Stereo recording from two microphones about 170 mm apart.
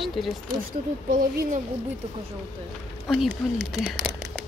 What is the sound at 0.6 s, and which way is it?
Speech, 55° right (ahead or behind).